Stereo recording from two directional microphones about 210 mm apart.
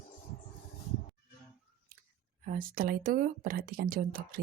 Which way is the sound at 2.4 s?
40° right (ahead or behind).